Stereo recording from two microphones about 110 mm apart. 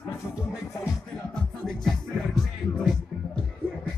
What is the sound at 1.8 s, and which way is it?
Music, centre (ahead or behind).